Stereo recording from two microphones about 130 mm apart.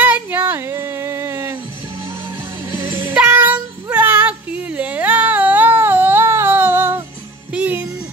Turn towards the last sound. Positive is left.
turn(degrees=-10)  # may be behind; listen again after turning